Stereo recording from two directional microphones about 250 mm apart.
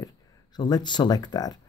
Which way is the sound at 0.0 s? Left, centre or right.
Centre.